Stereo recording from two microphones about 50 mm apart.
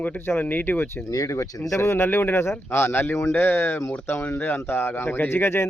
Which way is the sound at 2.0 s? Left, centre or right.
Left.